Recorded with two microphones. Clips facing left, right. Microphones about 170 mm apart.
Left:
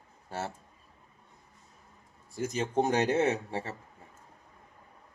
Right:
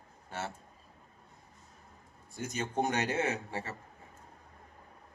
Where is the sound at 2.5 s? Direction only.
30° left (ahead or behind).